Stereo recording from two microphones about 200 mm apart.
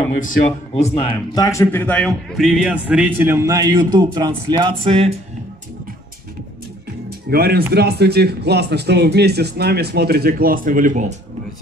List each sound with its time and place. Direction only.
0.1 s speech: 40° left (ahead or behind); by 5.1 s 25° right (ahead or behind)
7.1 s music: 50° right (ahead or behind)
7.7 s speech: 55° right (ahead or behind)